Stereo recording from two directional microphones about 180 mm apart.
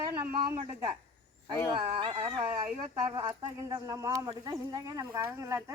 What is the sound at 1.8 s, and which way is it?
Speech, 30° right (ahead or behind).